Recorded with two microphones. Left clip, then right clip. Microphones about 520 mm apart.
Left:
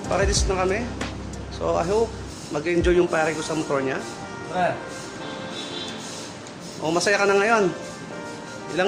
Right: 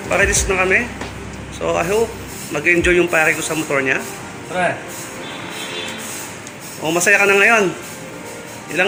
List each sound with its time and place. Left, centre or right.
0.1 s speech: left
6.8 s speech: left